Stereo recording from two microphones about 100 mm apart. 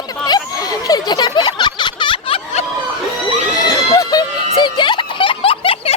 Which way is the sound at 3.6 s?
40° left (ahead or behind).